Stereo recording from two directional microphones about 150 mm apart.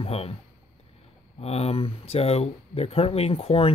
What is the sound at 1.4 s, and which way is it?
Speech, 45° left (ahead or behind).